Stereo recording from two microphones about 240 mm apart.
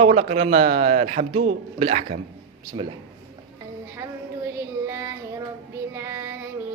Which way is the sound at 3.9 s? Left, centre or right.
Centre.